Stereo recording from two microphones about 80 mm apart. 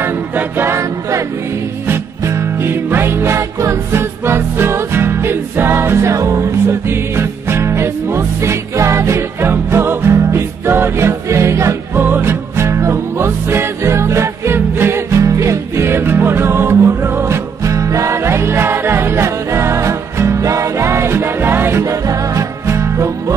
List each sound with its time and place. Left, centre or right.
0.0 s music: right
2.2 s music: right